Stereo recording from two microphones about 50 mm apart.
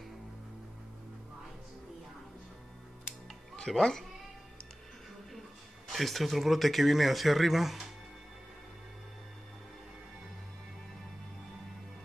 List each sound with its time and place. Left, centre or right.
3.5 s speech: centre
5.9 s speech: centre